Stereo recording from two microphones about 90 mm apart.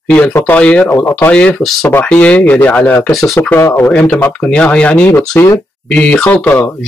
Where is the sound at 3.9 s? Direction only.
15° left (ahead or behind).